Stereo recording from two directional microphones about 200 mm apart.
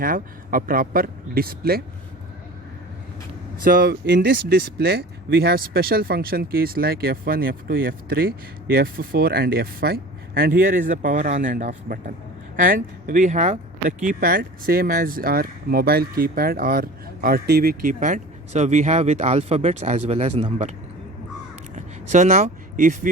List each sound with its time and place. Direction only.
0.0 s speech: 45° right (ahead or behind)
3.6 s speech: 50° right (ahead or behind); by 20.7 s 35° right (ahead or behind)
21.8 s vehicle: 35° right (ahead or behind)